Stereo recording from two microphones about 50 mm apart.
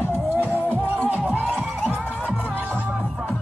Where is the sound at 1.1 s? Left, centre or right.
Right.